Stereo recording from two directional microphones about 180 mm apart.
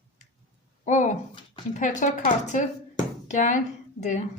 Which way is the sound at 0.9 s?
40° left (ahead or behind).